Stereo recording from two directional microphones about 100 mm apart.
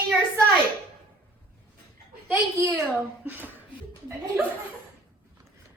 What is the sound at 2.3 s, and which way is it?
Speech, 30° right (ahead or behind).